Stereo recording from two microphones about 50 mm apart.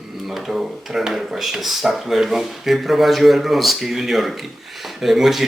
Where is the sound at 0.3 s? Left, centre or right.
Centre.